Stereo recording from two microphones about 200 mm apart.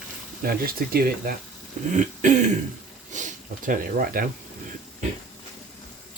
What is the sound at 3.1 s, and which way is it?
Speech, 40° right (ahead or behind).